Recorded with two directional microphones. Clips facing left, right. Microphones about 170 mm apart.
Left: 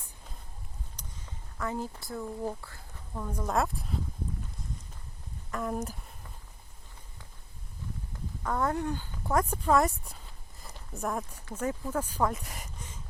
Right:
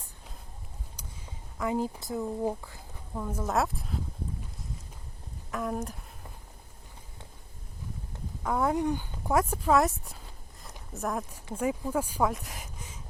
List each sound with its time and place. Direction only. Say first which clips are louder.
0.9 s speech: right 2 dB; 10° right (ahead or behind)
5.5 s speech: right 1 dB; centre (ahead or behind)
8.4 s speech: right 3 dB; 10° right (ahead or behind)